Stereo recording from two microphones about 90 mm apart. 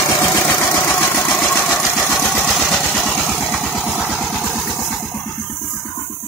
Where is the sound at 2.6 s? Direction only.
5° left (ahead or behind).